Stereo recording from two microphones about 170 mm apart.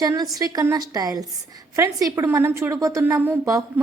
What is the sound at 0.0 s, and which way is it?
A woman's voice, 20° right (ahead or behind).